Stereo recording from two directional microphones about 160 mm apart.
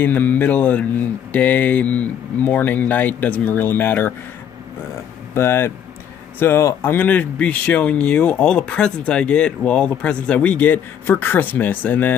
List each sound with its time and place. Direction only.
0.0 s speech: 10° left (ahead or behind)
5.3 s speech: 15° left (ahead or behind)